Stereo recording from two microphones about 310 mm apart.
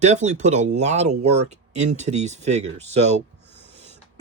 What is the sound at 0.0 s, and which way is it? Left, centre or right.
Speech, right.